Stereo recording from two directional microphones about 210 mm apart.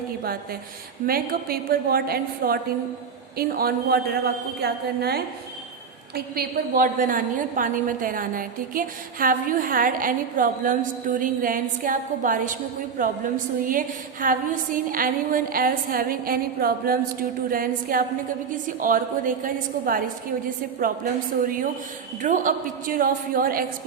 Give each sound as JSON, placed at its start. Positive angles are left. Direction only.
{"t": 1.0, "sound": "a woman's voice", "side_deg": -45}